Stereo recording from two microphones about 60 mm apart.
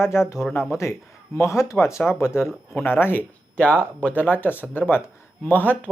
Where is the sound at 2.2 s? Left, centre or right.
Left.